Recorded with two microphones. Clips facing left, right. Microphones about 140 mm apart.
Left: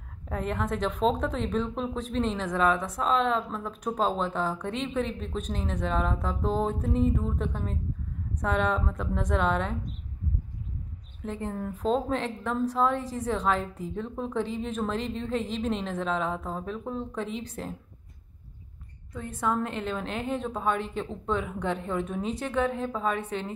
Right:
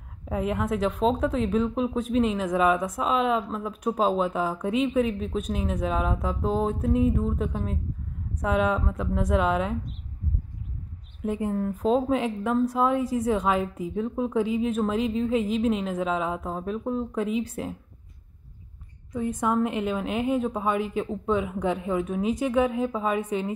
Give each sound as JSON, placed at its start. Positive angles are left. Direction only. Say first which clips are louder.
{"t": 0.2, "sound": "a woman's voice", "louder": "right 4 dB", "side_deg": -5}
{"t": 11.2, "sound": "a woman's voice", "louder": "right 6 dB", "side_deg": -10}
{"t": 19.1, "sound": "a woman's voice", "louder": "right 4 dB", "side_deg": -15}